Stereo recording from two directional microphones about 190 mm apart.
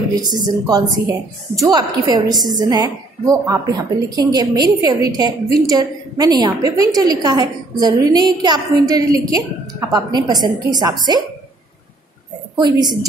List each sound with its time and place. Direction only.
0.2 s a woman's voice: 20° right (ahead or behind)
12.5 s a woman's voice: 20° right (ahead or behind)